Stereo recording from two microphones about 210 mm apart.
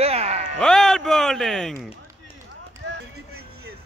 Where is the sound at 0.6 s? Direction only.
Centre (ahead or behind).